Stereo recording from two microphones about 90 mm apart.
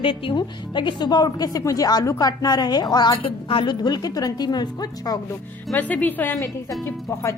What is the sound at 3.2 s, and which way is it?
Speech, 80° left.